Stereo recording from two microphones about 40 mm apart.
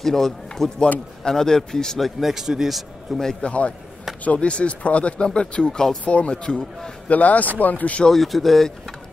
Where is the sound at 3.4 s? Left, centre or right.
Left.